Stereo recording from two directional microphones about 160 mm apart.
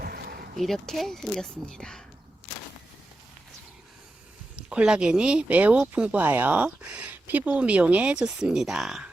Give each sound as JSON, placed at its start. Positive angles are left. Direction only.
{"t": 0.0, "sound": "a sound", "side_deg": -70}
{"t": 0.5, "sound": "speech", "side_deg": 0}
{"t": 4.7, "sound": "speech", "side_deg": -5}